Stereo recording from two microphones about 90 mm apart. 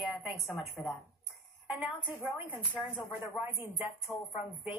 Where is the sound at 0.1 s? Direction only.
Centre (ahead or behind).